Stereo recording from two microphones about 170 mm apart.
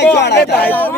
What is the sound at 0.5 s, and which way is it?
Speech, 10° left (ahead or behind).